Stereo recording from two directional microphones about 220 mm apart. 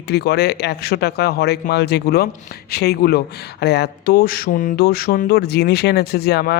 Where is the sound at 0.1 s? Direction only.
45° left (ahead or behind).